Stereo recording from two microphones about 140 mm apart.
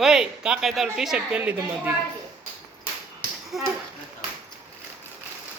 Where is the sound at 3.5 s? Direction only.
5° right (ahead or behind).